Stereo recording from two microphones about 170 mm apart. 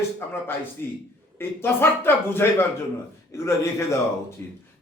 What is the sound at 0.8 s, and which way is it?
A man's voice, 15° left (ahead or behind).